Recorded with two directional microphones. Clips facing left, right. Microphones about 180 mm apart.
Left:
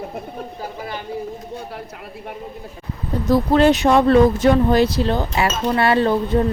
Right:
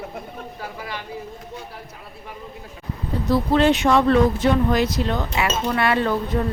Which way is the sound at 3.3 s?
40° left (ahead or behind).